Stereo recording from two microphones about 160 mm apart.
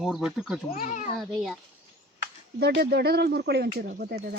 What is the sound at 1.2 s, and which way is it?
Speech, centre (ahead or behind).